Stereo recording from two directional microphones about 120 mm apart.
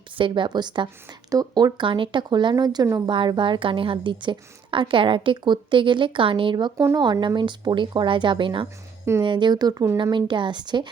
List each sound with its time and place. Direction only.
0.2 s speech: 45° right (ahead or behind)
3.1 s a woman's voice: 40° right (ahead or behind); by 10.0 s 25° right (ahead or behind)
10.0 s speech: 40° right (ahead or behind)